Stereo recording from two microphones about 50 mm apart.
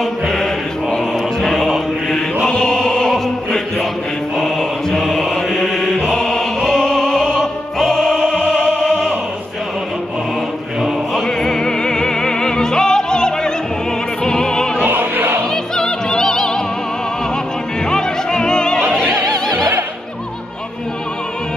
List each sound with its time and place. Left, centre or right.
0.0 s mantra: centre
2.4 s choir: centre
4.4 s mantra: centre
6.0 s music: centre
8.3 s opera: centre
11.2 s music: centre
14.2 s opera: centre
14.8 s opera: right
15.5 s opera: centre
17.8 s music: centre